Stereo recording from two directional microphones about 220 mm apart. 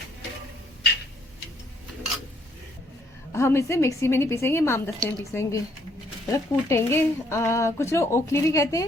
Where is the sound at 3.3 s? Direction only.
10° left (ahead or behind).